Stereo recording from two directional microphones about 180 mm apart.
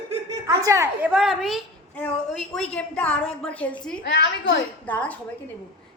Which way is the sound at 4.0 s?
70° left (ahead or behind).